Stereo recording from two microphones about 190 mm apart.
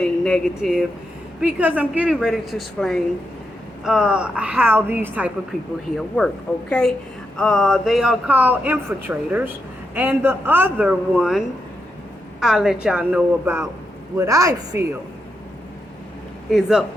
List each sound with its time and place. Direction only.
0.0 s a woman's voice: 5° left (ahead or behind)
6.0 s a woman's voice: 5° left (ahead or behind)
16.5 s a woman's voice: centre (ahead or behind)